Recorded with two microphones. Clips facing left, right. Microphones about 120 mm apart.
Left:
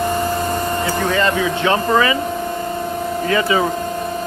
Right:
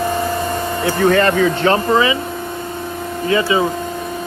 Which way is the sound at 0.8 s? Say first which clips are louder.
Right 7 dB; 55° right (ahead or behind).